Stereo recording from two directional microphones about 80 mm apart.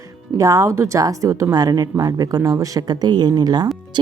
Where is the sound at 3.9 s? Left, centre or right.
Right.